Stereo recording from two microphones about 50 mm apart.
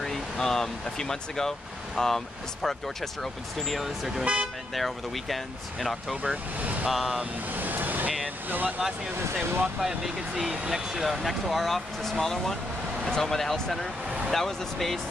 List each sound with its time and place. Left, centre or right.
0.0 s speech: centre
4.2 s speech: centre
4.7 s speech: centre
6.6 s vehicle: right
6.9 s speech: centre
7.5 s vehicle: right
8.5 s speech: right
9.8 s speech: centre